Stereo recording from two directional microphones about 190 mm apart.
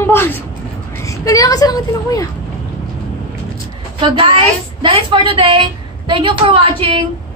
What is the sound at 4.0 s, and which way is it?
A woman's voice, 25° right (ahead or behind).